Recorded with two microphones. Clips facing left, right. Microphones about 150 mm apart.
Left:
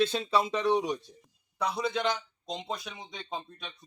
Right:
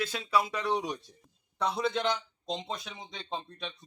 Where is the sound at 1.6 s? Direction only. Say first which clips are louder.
Even; centre (ahead or behind).